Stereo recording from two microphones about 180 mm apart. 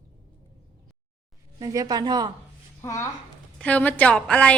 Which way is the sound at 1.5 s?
20° right (ahead or behind).